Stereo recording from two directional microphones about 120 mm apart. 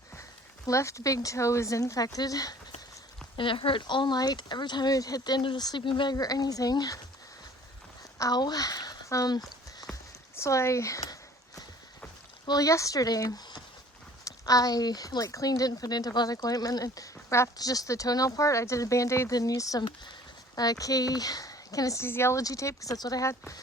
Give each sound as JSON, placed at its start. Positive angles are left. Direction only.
{"t": 0.2, "sound": "speech", "side_deg": 25}
{"t": 3.3, "sound": "speech", "side_deg": 45}
{"t": 8.2, "sound": "speech", "side_deg": 35}
{"t": 10.3, "sound": "a sound", "side_deg": 25}
{"t": 12.5, "sound": "speech", "side_deg": 30}